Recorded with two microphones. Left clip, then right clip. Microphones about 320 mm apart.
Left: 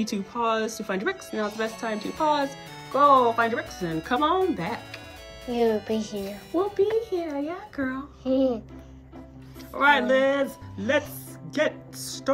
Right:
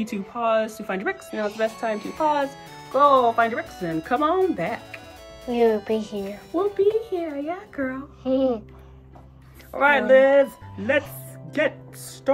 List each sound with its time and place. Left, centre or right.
0.0 s speech: centre
5.9 s speech: centre
6.3 s speech: centre
8.2 s a child's voice: right
9.7 s speech: centre
10.8 s speech: centre
11.5 s speech: centre